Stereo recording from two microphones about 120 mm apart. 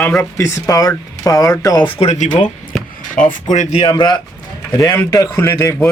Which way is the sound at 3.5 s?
75° left (ahead or behind).